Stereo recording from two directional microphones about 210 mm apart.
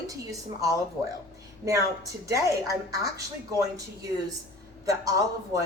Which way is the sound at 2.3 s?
15° right (ahead or behind).